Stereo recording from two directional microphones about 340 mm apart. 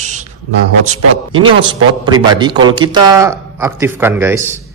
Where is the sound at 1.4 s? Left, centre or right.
Centre.